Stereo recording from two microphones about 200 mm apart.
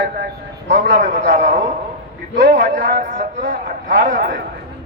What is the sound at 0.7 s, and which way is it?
A man's voice, 40° right (ahead or behind).